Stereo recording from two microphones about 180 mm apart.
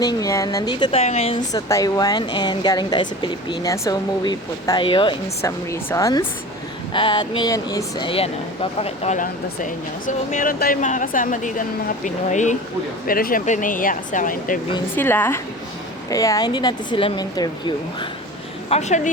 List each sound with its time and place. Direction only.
0.0 s speech: 20° left (ahead or behind)
1.4 s speech: 20° left (ahead or behind)
5.4 s speech: 15° left (ahead or behind)
8.8 s speech: 40° left (ahead or behind)
13.1 s speech: 55° left (ahead or behind)
14.9 s speech: 10° left (ahead or behind)
18.7 s a woman's voice: 40° left (ahead or behind)